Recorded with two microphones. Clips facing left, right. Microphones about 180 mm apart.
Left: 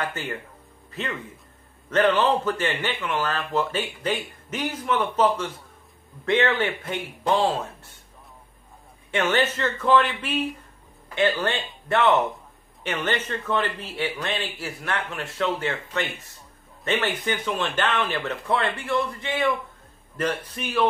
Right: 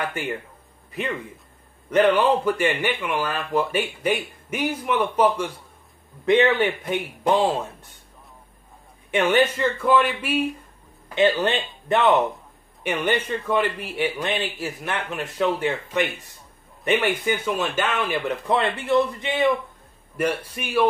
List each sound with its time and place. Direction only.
0.0 s speech: 15° right (ahead or behind)
1.9 s speech: 15° right (ahead or behind)
9.1 s speech: 15° right (ahead or behind)